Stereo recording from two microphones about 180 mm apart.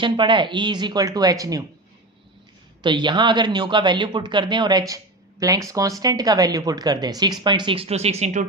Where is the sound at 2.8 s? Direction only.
25° right (ahead or behind).